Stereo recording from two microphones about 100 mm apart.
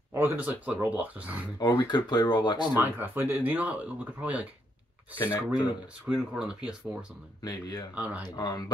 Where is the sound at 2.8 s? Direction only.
20° right (ahead or behind).